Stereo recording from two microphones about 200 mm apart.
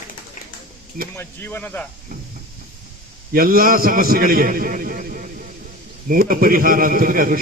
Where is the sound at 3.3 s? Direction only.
45° right (ahead or behind).